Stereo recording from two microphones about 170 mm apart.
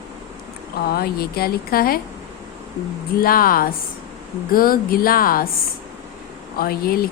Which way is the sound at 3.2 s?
60° left (ahead or behind).